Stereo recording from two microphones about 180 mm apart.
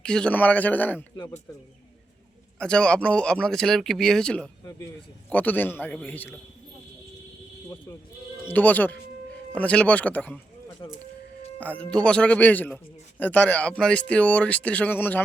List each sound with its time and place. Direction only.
0.0 s a man's voice: 5° left (ahead or behind)
2.6 s a man's voice: 5° left (ahead or behind)
8.4 s a man's voice: 10° left (ahead or behind)
10.8 s speech: 25° left (ahead or behind)
11.6 s a man's voice: 5° left (ahead or behind)